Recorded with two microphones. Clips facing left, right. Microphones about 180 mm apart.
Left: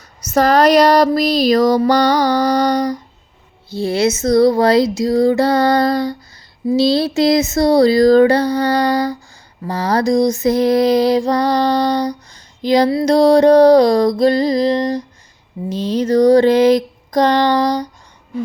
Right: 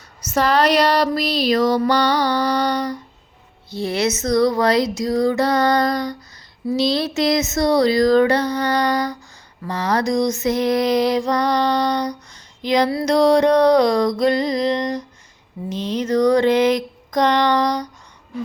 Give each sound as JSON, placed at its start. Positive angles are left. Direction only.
{"t": 0.3, "sound": "mantra", "side_deg": 40}
{"t": 3.7, "sound": "female singing", "side_deg": 30}
{"t": 6.7, "sound": "mantra", "side_deg": 30}